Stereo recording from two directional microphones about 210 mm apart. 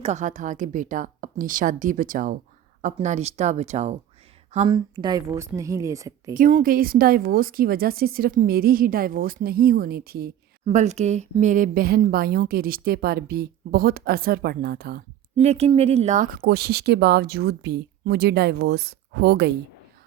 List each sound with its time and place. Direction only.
0.0 s a woman's voice: 35° right (ahead or behind); by 6.3 s 15° right (ahead or behind)
6.3 s speech: 40° right (ahead or behind)
10.7 s speech: 35° right (ahead or behind); by 15.0 s 50° right (ahead or behind)
15.4 s speech: 30° right (ahead or behind); by 19.5 s 50° right (ahead or behind)